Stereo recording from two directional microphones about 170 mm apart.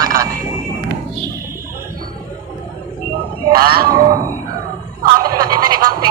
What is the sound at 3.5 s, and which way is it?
Speech, 60° right (ahead or behind).